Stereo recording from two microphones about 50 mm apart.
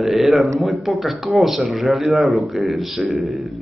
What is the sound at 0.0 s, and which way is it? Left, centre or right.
A man's voice, centre.